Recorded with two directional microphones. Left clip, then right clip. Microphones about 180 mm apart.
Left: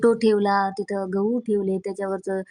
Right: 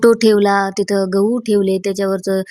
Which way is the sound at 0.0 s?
20° right (ahead or behind).